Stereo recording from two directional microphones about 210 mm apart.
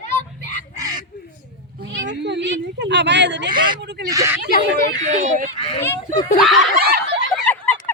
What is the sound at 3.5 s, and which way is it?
Speech, 20° right (ahead or behind).